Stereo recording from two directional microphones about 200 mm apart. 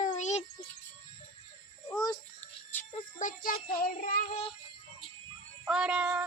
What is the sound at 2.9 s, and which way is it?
Music, 40° left (ahead or behind).